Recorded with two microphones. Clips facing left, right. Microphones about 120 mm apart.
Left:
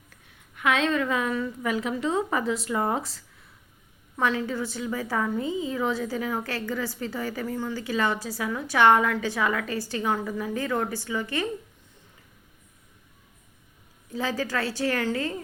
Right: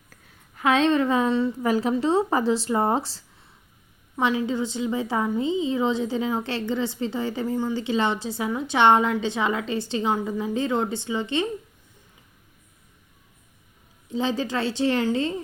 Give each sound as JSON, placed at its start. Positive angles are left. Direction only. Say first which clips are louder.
{"t": 0.1, "sound": "a woman's voice", "louder": "right 4 dB", "side_deg": -35}
{"t": 4.2, "sound": "a woman's voice", "louder": "right 3 dB", "side_deg": -20}
{"t": 14.1, "sound": "a woman's voice", "louder": "right 3 dB", "side_deg": -25}